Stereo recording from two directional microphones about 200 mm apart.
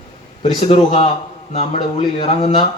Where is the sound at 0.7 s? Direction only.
30° left (ahead or behind).